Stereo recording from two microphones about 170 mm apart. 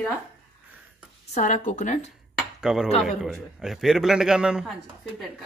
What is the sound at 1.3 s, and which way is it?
Speech, 50° left (ahead or behind).